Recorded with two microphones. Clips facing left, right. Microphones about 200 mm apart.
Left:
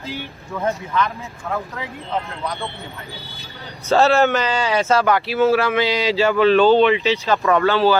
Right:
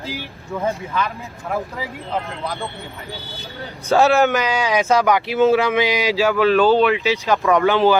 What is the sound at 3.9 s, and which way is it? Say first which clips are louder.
Speech: even; 15° right (ahead or behind).